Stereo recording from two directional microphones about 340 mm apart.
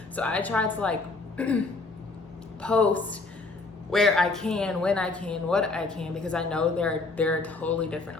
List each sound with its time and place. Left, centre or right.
0.2 s speech: centre
2.6 s speech: centre